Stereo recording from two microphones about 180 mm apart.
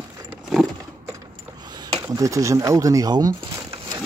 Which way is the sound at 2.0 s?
20° right (ahead or behind).